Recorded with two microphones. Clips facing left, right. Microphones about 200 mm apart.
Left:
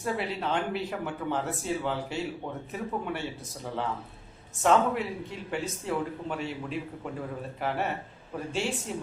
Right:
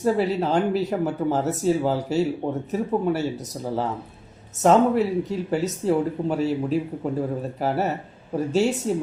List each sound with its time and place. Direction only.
0.0 s speech: 40° right (ahead or behind)